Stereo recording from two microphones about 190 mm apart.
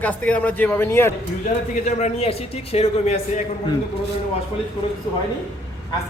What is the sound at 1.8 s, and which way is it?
Speech, 35° left (ahead or behind).